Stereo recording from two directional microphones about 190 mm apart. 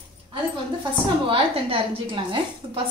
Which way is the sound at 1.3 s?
30° right (ahead or behind).